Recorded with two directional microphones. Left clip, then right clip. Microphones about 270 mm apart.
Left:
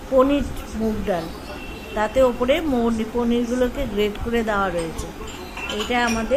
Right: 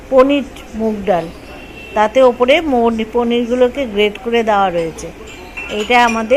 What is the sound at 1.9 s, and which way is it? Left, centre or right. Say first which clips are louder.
Speech: right 8 dB; centre.